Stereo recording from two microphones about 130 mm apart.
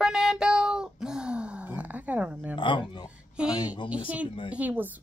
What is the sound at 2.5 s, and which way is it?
Speech, 35° left (ahead or behind).